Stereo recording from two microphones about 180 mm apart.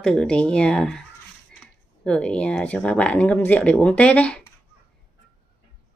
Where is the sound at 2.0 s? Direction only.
5° left (ahead or behind).